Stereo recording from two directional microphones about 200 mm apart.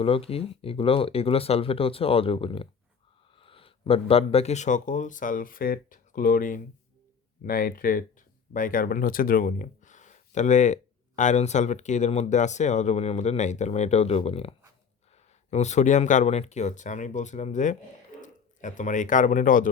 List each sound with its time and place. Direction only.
0.0 s speech: 30° left (ahead or behind)